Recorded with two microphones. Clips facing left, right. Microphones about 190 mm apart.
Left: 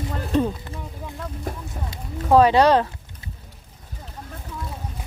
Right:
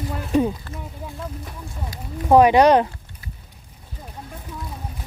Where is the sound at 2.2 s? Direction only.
15° right (ahead or behind).